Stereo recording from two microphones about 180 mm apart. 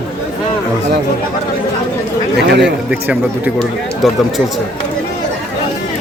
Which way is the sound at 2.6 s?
10° right (ahead or behind).